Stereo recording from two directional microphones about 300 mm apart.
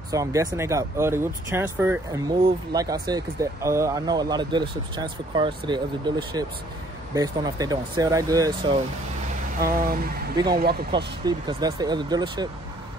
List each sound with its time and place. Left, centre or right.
0.1 s speech: centre
9.6 s a sound: right
10.3 s speech: centre